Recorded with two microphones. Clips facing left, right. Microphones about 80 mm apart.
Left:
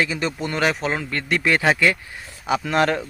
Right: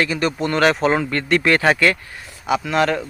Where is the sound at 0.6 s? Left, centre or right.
Centre.